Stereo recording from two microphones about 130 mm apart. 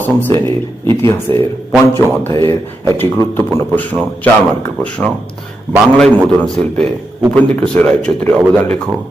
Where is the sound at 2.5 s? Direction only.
20° left (ahead or behind).